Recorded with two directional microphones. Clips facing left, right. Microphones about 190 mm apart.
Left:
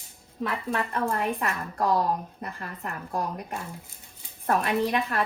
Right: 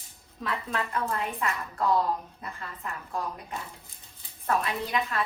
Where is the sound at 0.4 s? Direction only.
25° left (ahead or behind).